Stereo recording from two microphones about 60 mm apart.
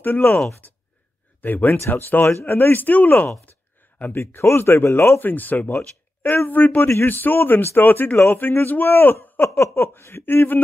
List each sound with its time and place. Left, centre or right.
0.0 s speech: left
1.4 s speech: left
4.1 s speech: left
5.2 s speech: left